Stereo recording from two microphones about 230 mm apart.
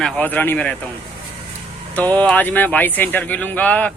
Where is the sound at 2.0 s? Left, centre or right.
Centre.